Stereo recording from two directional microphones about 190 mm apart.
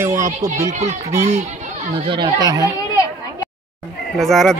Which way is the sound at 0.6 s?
35° right (ahead or behind).